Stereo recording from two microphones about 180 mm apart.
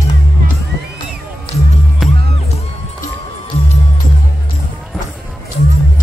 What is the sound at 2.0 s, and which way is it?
Music, centre (ahead or behind).